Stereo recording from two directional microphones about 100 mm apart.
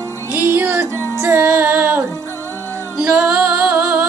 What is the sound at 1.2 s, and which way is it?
Music, 25° right (ahead or behind).